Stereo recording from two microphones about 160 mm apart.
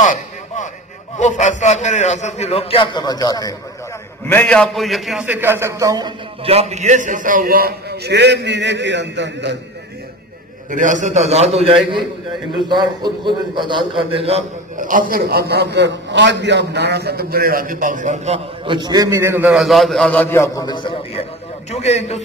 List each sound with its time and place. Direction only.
0.0 s a sound: 50° left (ahead or behind)
1.1 s a man's voice: 50° left (ahead or behind); by 3.5 s 25° left (ahead or behind)
4.3 s a man's voice: 10° left (ahead or behind); by 6.5 s 25° right (ahead or behind)
6.5 s a man's voice: 40° right (ahead or behind); by 9.6 s 90° right
10.7 s a man's voice: 55° right (ahead or behind)
12.6 s a man's voice: 30° right (ahead or behind)
14.8 s a man's voice: 55° right (ahead or behind); by 19.5 s 15° right (ahead or behind)
19.5 s a man's voice: centre (ahead or behind); by 20.6 s 15° left (ahead or behind)
20.6 s a man's voice: 30° left (ahead or behind)